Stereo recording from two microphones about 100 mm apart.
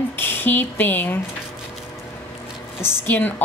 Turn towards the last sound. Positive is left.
turn(degrees=20)  # may be behind; listen again after turning